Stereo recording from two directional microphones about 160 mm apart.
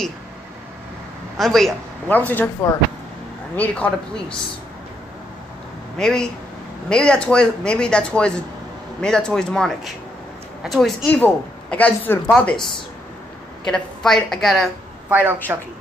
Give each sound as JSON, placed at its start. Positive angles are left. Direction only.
{"t": 1.4, "sound": "speech", "side_deg": 0}
{"t": 5.9, "sound": "speech", "side_deg": 5}
{"t": 11.1, "sound": "speech", "side_deg": 10}
{"t": 13.7, "sound": "speech", "side_deg": 5}
{"t": 15.0, "sound": "a woman's voice", "side_deg": -10}